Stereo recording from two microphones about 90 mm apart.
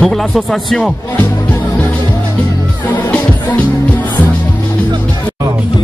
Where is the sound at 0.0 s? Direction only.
5° left (ahead or behind).